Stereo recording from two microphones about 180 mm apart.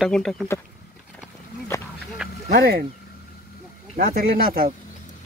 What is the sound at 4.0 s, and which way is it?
Speech, 55° right (ahead or behind).